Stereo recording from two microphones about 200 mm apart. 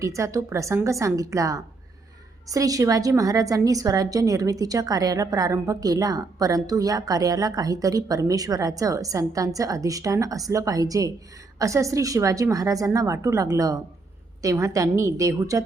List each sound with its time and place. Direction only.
0.0 s a woman's voice: 15° right (ahead or behind)